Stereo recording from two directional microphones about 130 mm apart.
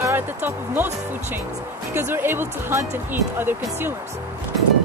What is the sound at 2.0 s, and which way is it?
Speech, 15° right (ahead or behind).